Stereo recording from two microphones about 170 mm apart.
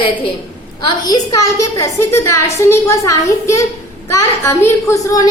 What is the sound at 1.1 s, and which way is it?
A woman's voice, 20° left (ahead or behind).